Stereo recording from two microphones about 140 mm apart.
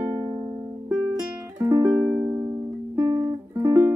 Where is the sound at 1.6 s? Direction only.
25° right (ahead or behind).